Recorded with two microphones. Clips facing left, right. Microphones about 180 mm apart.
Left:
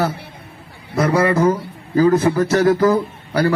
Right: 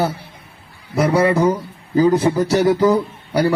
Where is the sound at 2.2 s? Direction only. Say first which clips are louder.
Even; 15° right (ahead or behind).